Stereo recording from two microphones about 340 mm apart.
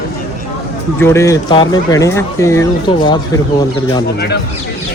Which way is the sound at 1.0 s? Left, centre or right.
Centre.